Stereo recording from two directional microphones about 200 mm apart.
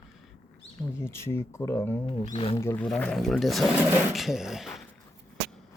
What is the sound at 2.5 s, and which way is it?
Speech, 10° left (ahead or behind).